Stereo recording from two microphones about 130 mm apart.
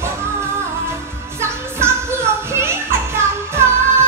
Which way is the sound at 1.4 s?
20° right (ahead or behind).